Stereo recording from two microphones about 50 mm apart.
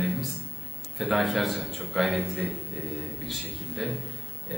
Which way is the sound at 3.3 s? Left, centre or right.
Centre.